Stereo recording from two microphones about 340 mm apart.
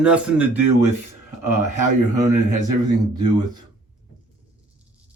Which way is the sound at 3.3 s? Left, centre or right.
Centre.